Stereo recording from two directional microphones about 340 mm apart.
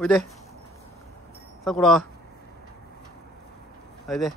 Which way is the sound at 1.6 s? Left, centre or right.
Centre.